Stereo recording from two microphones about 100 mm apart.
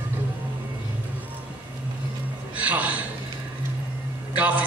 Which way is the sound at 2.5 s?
15° right (ahead or behind).